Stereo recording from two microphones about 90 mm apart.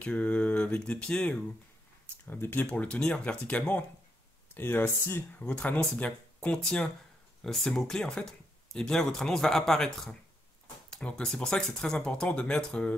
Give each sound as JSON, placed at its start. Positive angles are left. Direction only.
{"t": 0.0, "sound": "speech", "side_deg": 15}
{"t": 2.2, "sound": "speech", "side_deg": 25}
{"t": 5.4, "sound": "speech", "side_deg": 15}
{"t": 10.9, "sound": "speech", "side_deg": 10}